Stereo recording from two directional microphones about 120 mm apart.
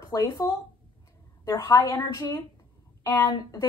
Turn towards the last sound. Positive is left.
turn(degrees=30)  # may be behind; listen again after turning